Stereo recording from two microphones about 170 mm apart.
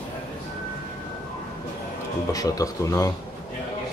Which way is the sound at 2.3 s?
20° left (ahead or behind).